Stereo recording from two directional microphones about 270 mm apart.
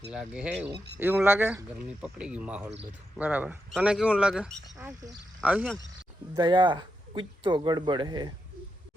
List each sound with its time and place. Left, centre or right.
0.1 s speech: centre
6.3 s speech: centre